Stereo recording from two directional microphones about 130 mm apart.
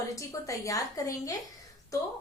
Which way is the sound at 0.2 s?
25° left (ahead or behind).